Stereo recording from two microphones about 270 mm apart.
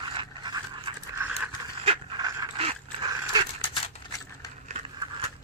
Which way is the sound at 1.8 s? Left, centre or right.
Centre.